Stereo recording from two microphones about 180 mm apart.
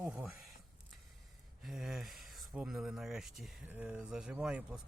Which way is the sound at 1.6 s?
Centre (ahead or behind).